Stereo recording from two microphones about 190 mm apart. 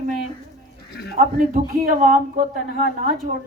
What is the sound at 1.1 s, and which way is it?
Speech, 50° right (ahead or behind).